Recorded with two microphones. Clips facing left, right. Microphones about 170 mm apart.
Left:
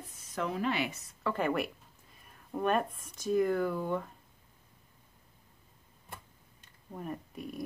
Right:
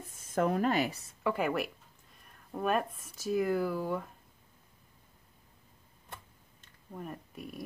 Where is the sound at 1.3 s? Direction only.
5° right (ahead or behind).